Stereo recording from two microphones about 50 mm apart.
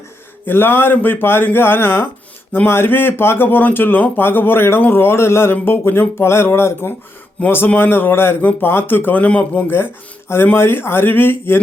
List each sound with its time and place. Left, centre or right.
0.4 s speech: left
7.4 s speech: left
7.8 s speech: left
9.1 s a man's voice: left
9.6 s speech: left